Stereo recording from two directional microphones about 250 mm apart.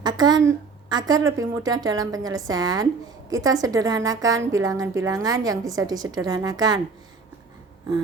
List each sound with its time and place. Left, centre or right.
0.0 s a woman's voice: centre